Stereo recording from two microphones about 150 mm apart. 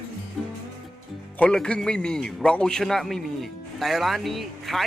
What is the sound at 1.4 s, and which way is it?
A man's voice, 5° left (ahead or behind).